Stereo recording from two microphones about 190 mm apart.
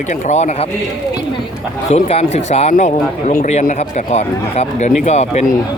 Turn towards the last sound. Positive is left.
turn(degrees=35)  # may be behind; listen again after turning